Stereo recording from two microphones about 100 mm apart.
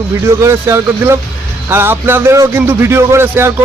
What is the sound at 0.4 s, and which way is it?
Speech, 25° right (ahead or behind).